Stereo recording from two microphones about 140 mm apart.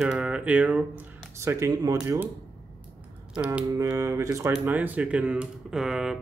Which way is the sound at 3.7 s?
20° right (ahead or behind).